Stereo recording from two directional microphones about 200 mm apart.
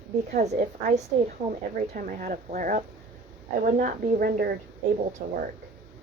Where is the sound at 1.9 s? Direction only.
40° right (ahead or behind).